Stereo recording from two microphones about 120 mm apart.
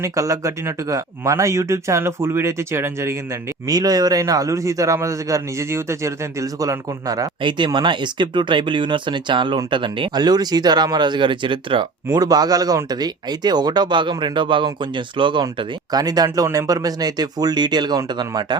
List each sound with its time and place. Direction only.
0.0 s speech: 25° right (ahead or behind)
3.7 s speech: 30° right (ahead or behind)
7.4 s speech: 40° right (ahead or behind)
12.1 s speech: 35° right (ahead or behind)